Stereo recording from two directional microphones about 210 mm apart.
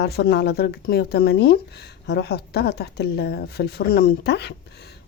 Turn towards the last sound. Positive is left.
turn(degrees=50)  # may be behind; listen again after turning